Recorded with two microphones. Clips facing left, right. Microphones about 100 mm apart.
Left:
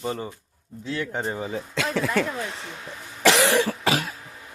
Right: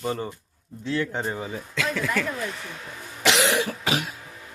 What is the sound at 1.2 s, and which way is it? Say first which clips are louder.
A woman's voice: left 1 dB; 20° left (ahead or behind).